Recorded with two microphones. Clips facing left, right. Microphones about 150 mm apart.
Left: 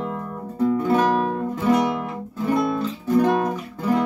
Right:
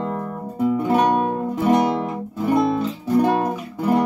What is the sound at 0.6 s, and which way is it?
Music, 10° right (ahead or behind).